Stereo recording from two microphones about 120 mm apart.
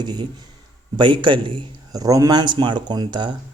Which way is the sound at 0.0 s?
35° right (ahead or behind).